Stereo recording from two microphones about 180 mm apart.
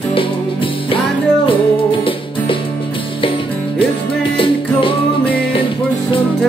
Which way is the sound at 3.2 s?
30° left (ahead or behind).